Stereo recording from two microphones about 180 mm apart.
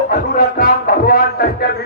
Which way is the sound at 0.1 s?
55° left (ahead or behind).